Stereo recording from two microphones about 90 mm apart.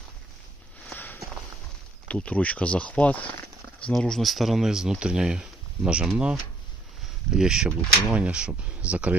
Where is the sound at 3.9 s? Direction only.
5° left (ahead or behind).